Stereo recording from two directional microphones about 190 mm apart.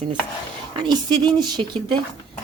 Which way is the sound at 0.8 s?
25° right (ahead or behind).